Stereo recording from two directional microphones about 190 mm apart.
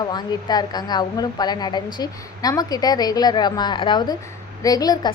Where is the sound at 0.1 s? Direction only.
20° left (ahead or behind).